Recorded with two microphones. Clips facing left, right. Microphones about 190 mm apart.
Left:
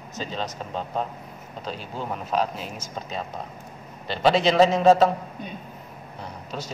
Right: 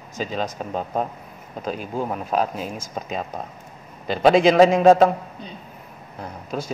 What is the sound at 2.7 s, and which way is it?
Speech, 10° right (ahead or behind).